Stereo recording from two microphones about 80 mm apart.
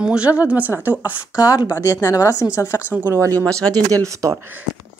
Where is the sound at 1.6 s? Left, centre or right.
Left.